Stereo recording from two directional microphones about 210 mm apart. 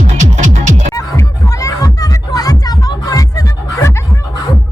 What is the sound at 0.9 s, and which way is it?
Music, 15° left (ahead or behind).